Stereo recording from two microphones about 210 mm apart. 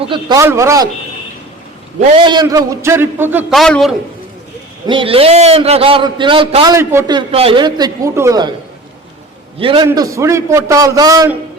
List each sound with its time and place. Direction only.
0.1 s a man's voice: 20° right (ahead or behind)
2.1 s a man's voice: 20° right (ahead or behind)
3.5 s a man's voice: centre (ahead or behind)
4.9 s a man's voice: 25° right (ahead or behind)
9.6 s a man's voice: 25° right (ahead or behind)